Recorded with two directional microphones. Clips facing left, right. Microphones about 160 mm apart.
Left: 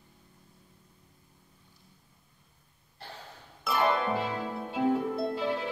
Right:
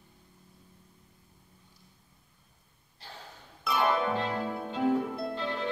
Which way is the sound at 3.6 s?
Centre (ahead or behind).